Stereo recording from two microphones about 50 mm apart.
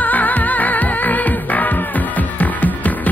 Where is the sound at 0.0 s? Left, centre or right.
Left.